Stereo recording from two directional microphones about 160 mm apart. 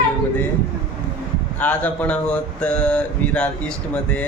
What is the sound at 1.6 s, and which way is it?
Speech, 10° left (ahead or behind).